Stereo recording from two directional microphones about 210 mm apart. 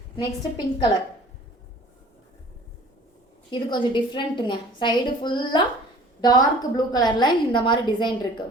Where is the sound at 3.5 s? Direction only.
20° left (ahead or behind).